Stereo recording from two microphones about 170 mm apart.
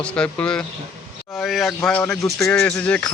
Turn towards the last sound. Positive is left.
turn(degrees=5)  # may be behind; listen again after turning